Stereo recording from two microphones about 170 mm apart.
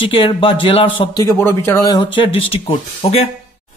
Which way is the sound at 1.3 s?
15° left (ahead or behind).